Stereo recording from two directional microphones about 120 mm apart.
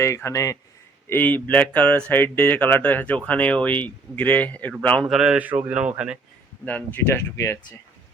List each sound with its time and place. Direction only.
0.0 s speech: 25° left (ahead or behind)
1.0 s speech: 15° left (ahead or behind)
5.0 s speech: 5° right (ahead or behind)
6.7 s speech: 15° left (ahead or behind)